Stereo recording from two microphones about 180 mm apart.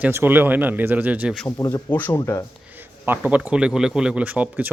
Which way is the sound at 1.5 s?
15° left (ahead or behind).